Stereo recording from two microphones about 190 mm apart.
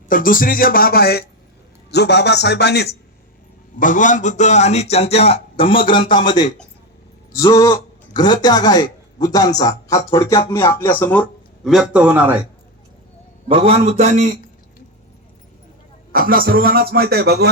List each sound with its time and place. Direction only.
0.1 s music: 45° left (ahead or behind)
1.9 s a man's voice: 60° left (ahead or behind)
3.8 s a man's voice: 45° left (ahead or behind); by 12.4 s 10° right (ahead or behind)
13.5 s a man's voice: 30° right (ahead or behind)
16.1 s speech: 50° right (ahead or behind)